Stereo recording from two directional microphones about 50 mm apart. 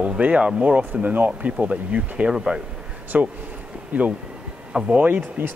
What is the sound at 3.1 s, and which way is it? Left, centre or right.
Speech, right.